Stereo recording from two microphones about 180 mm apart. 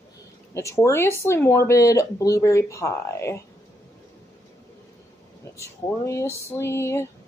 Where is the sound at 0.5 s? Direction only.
15° left (ahead or behind).